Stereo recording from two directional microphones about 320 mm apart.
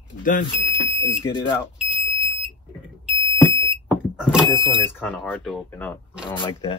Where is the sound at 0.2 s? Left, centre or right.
Left.